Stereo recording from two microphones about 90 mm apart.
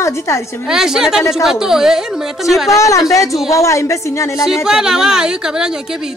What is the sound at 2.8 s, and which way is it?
A man's voice, 35° left (ahead or behind).